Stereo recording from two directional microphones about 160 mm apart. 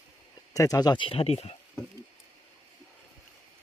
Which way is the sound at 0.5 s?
20° left (ahead or behind).